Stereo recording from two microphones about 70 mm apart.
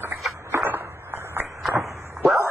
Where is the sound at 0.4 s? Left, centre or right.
Right.